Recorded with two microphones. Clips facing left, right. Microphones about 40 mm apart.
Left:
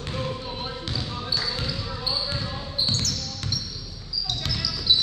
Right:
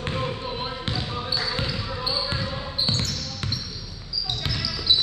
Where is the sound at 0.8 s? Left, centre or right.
Right.